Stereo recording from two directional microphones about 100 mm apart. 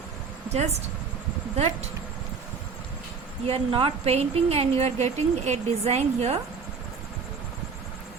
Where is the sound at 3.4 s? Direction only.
65° right (ahead or behind); by 6.4 s 90° right.